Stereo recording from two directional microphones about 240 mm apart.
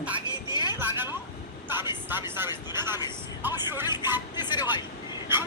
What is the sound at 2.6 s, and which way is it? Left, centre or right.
Speech, centre.